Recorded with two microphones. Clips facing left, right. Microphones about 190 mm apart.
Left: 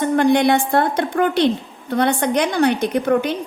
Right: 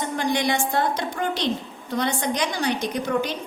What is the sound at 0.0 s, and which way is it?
A woman's voice, 60° left (ahead or behind).